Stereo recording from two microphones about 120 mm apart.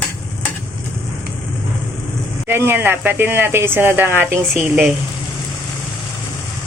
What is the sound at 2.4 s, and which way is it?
Speech, 20° right (ahead or behind).